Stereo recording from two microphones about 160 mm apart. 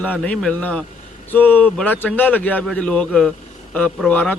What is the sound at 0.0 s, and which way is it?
A man's voice, 10° left (ahead or behind).